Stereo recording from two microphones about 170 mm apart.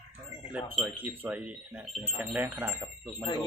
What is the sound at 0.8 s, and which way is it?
Speech, 10° right (ahead or behind).